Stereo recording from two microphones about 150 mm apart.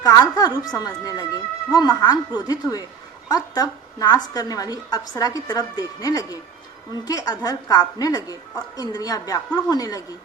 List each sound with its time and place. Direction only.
0.0 s a woman's voice: 25° left (ahead or behind)